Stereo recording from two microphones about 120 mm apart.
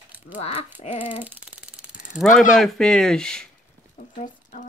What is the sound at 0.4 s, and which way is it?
Speech, 60° left (ahead or behind).